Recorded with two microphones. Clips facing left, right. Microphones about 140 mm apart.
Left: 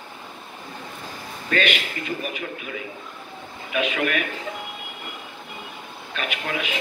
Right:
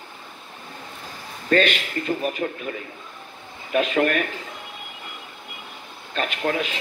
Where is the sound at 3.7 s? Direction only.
40° right (ahead or behind).